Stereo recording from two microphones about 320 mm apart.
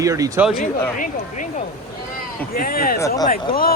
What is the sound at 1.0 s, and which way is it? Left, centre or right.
Speech, left.